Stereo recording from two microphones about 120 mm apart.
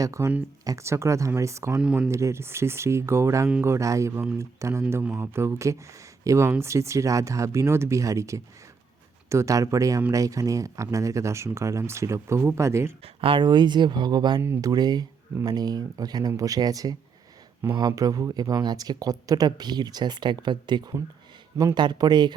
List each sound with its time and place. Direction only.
0.0 s speech: 25° right (ahead or behind)
1.8 s speech: 10° right (ahead or behind)
2.0 s speech: 25° right (ahead or behind)
13.2 s speech: 40° right (ahead or behind)